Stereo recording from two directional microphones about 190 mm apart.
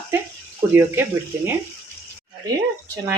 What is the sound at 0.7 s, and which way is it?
Speech, 10° right (ahead or behind).